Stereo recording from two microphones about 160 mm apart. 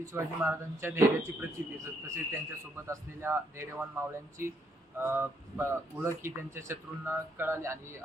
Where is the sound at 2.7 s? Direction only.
15° right (ahead or behind).